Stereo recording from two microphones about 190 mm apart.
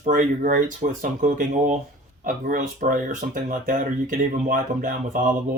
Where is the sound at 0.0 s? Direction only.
45° right (ahead or behind).